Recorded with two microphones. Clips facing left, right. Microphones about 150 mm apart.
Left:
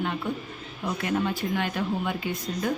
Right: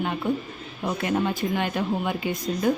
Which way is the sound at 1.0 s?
20° right (ahead or behind).